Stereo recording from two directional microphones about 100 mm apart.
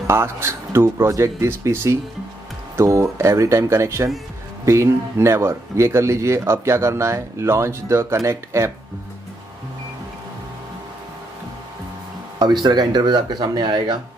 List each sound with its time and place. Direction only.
0.0 s speech: 25° right (ahead or behind)
12.6 s speech: 45° right (ahead or behind)